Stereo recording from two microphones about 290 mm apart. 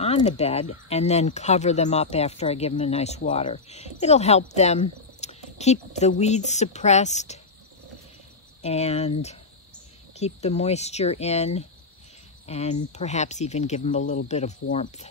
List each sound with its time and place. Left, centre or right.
0.0 s speech: left
8.6 s speech: left
10.1 s speech: left